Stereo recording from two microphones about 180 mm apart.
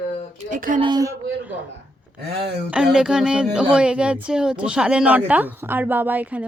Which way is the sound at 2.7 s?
5° right (ahead or behind).